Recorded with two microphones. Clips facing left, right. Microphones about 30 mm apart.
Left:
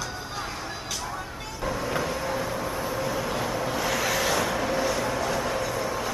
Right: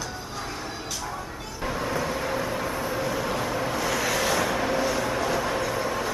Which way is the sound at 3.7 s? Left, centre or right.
Centre.